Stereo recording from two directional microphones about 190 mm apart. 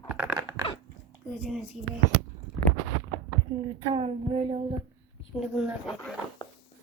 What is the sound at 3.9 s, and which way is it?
Speech, 30° right (ahead or behind).